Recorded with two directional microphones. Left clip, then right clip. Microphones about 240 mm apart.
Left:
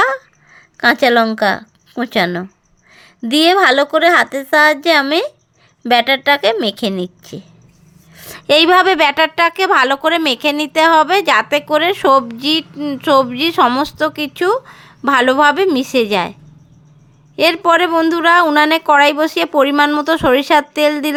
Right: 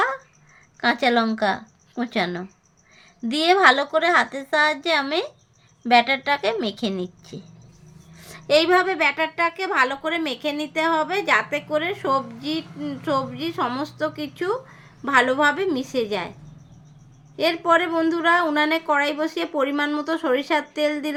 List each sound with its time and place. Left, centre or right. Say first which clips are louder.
0.0 s a sound: left 9 dB; left
2.9 s a woman's voice: left 11 dB; left
17.3 s a woman's voice: left 7 dB; left